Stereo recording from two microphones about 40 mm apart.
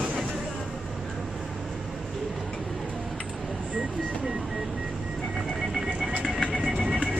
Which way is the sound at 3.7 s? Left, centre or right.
Right.